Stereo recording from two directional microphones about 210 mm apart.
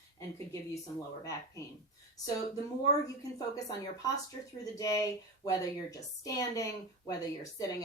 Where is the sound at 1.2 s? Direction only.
15° left (ahead or behind).